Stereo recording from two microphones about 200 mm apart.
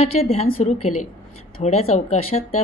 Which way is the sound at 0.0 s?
30° left (ahead or behind).